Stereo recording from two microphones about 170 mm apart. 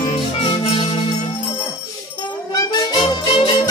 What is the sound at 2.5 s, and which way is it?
Music, 25° left (ahead or behind).